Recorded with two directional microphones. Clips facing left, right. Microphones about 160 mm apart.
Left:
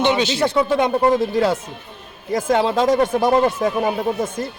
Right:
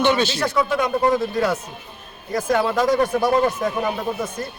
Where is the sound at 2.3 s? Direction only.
25° left (ahead or behind).